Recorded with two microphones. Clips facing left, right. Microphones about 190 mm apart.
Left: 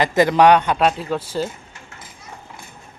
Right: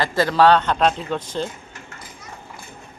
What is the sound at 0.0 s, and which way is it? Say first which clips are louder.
A man's voice: left 3 dB; 20° left (ahead or behind).